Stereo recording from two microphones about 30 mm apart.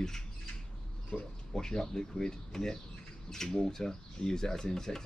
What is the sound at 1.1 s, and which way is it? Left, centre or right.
Speech, left.